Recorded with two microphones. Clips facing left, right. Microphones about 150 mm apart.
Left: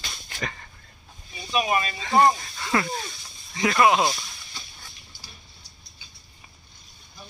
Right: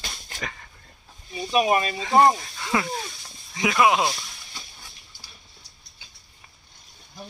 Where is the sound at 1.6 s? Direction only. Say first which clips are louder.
Right 3 dB; 35° right (ahead or behind).